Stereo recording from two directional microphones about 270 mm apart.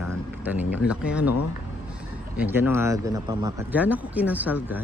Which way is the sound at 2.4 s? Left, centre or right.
Centre.